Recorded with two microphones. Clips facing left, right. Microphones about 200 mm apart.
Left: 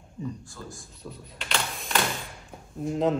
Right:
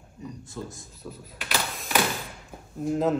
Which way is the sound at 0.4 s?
20° right (ahead or behind).